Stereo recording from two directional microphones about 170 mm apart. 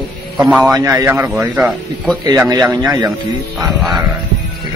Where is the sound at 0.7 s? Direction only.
20° right (ahead or behind).